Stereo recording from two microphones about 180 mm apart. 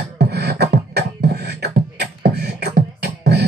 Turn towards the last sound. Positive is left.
turn(degrees=-65)  # may be behind; listen again after turning